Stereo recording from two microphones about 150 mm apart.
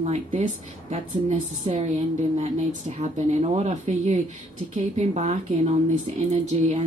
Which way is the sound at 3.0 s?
50° right (ahead or behind).